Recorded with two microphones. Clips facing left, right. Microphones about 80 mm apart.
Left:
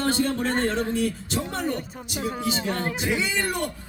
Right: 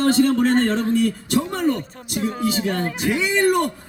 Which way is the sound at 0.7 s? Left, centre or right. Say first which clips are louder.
Right 5 dB; right.